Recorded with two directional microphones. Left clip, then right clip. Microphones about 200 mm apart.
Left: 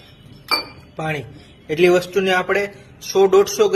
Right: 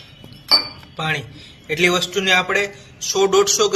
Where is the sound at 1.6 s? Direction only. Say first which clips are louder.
Left 2 dB; 20° left (ahead or behind).